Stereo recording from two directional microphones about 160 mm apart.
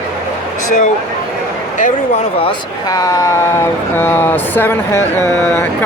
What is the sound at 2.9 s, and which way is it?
Speech, 20° left (ahead or behind).